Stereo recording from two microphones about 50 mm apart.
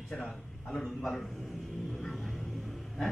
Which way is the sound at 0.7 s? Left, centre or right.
Centre.